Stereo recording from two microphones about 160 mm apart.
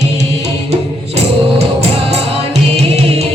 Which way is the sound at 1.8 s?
40° right (ahead or behind).